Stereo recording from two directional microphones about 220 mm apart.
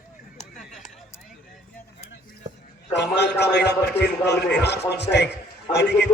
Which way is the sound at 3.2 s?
50° left (ahead or behind).